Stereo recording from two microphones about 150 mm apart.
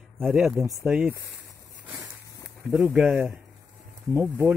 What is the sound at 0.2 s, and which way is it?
Speech, centre (ahead or behind).